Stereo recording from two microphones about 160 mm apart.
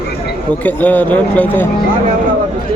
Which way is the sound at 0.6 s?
10° left (ahead or behind).